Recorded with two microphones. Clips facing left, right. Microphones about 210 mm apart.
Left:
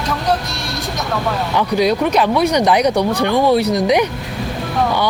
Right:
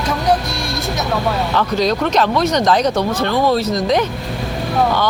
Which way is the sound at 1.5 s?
10° left (ahead or behind).